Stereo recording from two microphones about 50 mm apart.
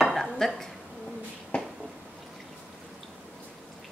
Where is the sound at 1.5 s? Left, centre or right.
Left.